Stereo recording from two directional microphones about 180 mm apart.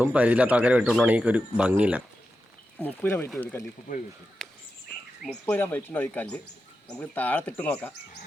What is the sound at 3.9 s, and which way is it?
Speech, 50° left (ahead or behind).